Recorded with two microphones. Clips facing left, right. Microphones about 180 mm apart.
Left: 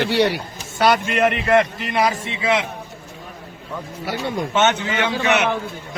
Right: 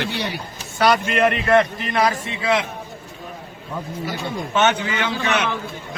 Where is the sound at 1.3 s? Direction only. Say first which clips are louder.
Even; 20° left (ahead or behind).